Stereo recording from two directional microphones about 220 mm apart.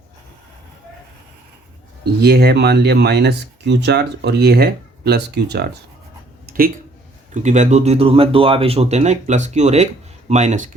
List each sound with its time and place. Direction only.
2.2 s speech: 45° right (ahead or behind)
6.4 s a sound: 40° right (ahead or behind)
7.4 s speech: 35° right (ahead or behind)